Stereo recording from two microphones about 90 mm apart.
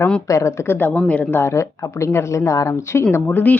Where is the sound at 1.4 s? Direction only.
30° left (ahead or behind).